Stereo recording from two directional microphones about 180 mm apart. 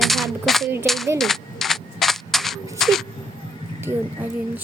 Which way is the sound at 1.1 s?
Centre (ahead or behind).